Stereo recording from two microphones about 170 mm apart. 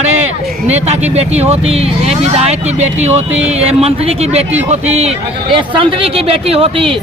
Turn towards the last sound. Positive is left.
turn(degrees=-35)  # may be behind; listen again after turning